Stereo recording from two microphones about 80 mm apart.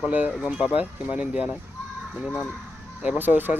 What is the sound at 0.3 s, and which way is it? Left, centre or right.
Speech, centre.